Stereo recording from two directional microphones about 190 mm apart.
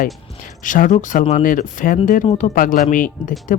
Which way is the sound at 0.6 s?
45° left (ahead or behind).